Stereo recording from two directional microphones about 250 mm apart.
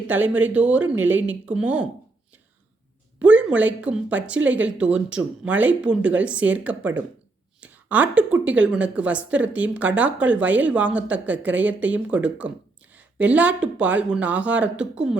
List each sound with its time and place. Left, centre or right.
0.1 s a woman's voice: centre
3.2 s a woman's voice: centre